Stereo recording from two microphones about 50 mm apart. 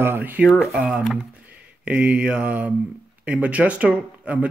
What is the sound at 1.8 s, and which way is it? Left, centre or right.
Speech, right.